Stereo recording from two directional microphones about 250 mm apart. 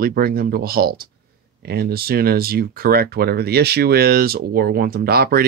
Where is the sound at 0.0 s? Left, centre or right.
Right.